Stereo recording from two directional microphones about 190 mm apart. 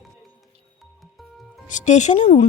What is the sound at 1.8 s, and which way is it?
Speech, 40° left (ahead or behind).